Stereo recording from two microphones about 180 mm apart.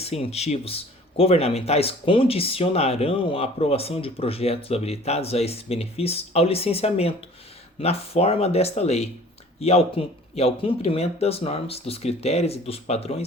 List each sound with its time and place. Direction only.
0.0 s speech: 35° left (ahead or behind)